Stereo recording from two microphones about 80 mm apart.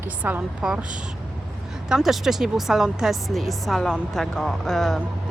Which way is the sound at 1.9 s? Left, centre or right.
Centre.